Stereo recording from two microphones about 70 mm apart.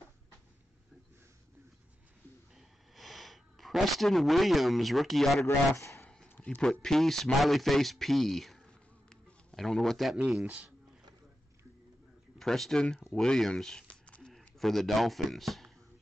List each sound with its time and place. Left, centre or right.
2.5 s sniff: centre
5.8 s speech: left
6.6 s a man's voice: centre
10.4 s speech: right
12.4 s speech: centre
14.6 s a man's voice: centre